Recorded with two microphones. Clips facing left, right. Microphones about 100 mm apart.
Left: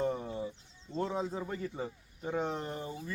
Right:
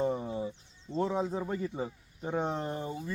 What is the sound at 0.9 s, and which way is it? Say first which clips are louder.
Speech: right 4 dB; 15° right (ahead or behind).